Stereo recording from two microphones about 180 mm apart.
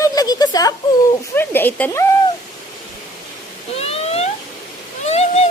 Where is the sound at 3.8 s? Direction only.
35° left (ahead or behind).